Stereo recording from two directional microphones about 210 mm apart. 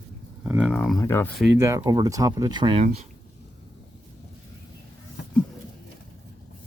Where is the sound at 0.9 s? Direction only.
10° left (ahead or behind).